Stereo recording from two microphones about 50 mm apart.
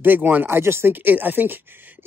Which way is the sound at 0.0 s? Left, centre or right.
Right.